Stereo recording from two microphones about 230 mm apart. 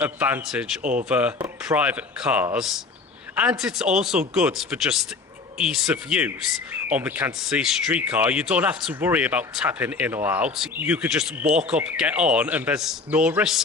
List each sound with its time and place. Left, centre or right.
0.0 s speech: centre
0.8 s speech: right
1.0 s speech: centre